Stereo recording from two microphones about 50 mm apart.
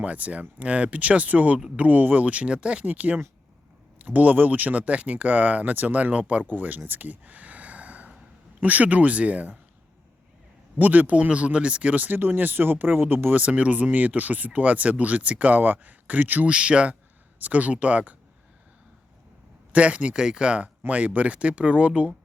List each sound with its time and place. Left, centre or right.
0.0 s speech: right
2.8 s speech: right
10.8 s speech: right
12.0 s speech: right
13.2 s speech: right
16.5 s speech: right
19.7 s speech: right
20.1 s speech: centre
20.8 s speech: right